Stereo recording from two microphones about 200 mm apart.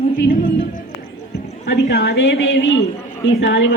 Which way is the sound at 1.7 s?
60° left (ahead or behind).